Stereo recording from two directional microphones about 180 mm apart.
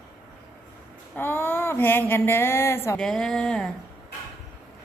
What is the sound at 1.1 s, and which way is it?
Speech, 10° left (ahead or behind).